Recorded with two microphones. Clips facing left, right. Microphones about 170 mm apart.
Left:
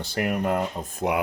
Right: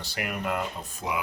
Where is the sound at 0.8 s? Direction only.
55° left (ahead or behind).